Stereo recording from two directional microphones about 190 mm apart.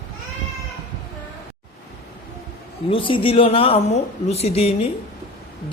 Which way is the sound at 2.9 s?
25° left (ahead or behind).